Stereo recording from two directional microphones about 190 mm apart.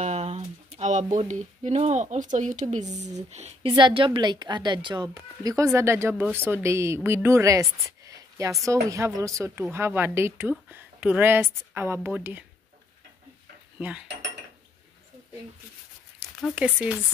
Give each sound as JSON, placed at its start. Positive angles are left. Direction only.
{"t": 0.0, "sound": "a sound", "side_deg": -35}
{"t": 1.1, "sound": "a woman's voice", "side_deg": -40}
{"t": 13.7, "sound": "cutlery", "side_deg": -10}
{"t": 16.5, "sound": "a woman's voice", "side_deg": -5}